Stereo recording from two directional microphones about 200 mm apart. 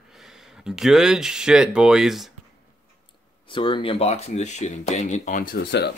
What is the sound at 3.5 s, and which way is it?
Speech, 25° left (ahead or behind).